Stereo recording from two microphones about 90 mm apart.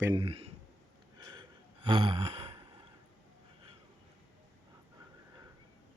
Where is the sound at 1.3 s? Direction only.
60° right (ahead or behind); by 2.5 s 90° right.